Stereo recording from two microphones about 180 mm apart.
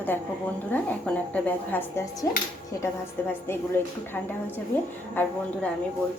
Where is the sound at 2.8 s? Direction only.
10° left (ahead or behind).